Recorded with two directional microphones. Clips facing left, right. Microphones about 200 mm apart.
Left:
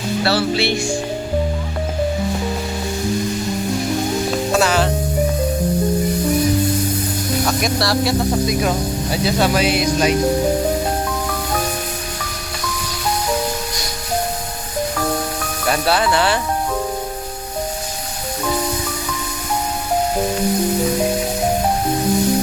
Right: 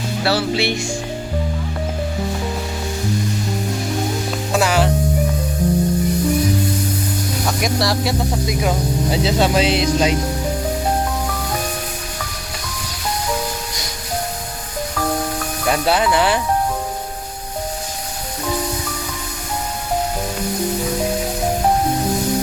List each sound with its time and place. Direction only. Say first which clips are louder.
0.3 s speech: even; 15° right (ahead or behind)
4.5 s music: right 1 dB; 15° right (ahead or behind)
7.6 s speech: left 1 dB; 15° right (ahead or behind)
9.2 s music: left 1 dB; 25° right (ahead or behind)
15.7 s speech: even; 15° right (ahead or behind)